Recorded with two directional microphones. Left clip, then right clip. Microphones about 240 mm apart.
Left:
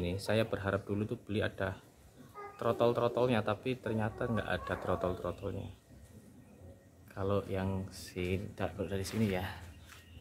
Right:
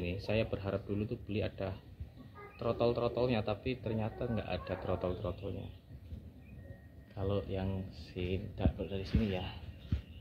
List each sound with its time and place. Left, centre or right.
0.0 s speech: left
0.5 s a man's voice: centre
7.2 s a man's voice: centre
7.9 s speech: left
8.5 s speech: left